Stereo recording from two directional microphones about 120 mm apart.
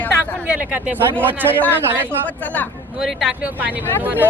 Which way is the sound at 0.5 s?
15° right (ahead or behind).